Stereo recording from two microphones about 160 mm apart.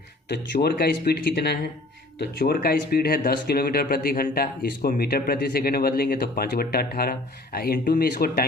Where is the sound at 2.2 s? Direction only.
75° left (ahead or behind).